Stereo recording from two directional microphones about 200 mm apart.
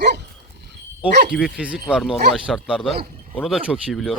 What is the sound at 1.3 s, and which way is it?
Speech, centre (ahead or behind).